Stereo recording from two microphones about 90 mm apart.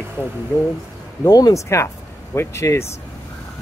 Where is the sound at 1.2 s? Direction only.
40° left (ahead or behind).